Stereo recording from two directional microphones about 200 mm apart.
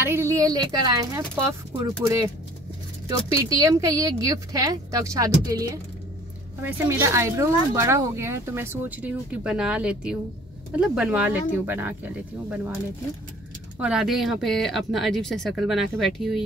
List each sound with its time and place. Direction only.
0.0 s speech: 15° right (ahead or behind)
13.7 s speech: 5° right (ahead or behind)